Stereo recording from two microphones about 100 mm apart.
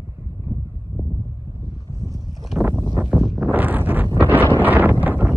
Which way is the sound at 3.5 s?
20° right (ahead or behind).